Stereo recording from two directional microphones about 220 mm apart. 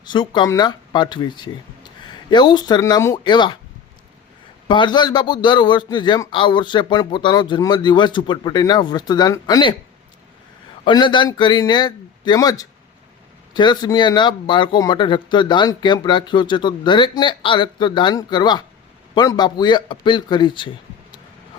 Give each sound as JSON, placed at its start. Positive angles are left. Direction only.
{"t": 0.1, "sound": "speech", "side_deg": 20}
{"t": 4.7, "sound": "speech", "side_deg": 20}
{"t": 10.8, "sound": "speech", "side_deg": 20}